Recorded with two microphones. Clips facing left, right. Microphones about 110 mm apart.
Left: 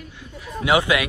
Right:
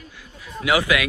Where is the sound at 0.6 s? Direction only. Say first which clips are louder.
Left 1 dB; 25° left (ahead or behind).